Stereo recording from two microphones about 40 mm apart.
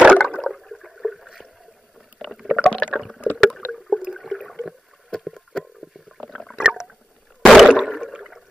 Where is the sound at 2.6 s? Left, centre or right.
Left.